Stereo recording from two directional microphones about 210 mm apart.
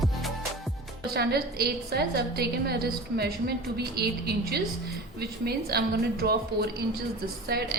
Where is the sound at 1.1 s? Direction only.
50° right (ahead or behind).